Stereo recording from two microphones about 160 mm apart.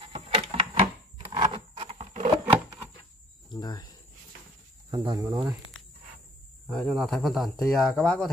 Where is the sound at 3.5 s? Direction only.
25° left (ahead or behind).